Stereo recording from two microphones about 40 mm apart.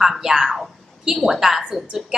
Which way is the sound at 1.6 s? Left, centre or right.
Right.